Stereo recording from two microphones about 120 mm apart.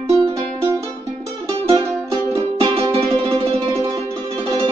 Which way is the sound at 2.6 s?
55° right (ahead or behind).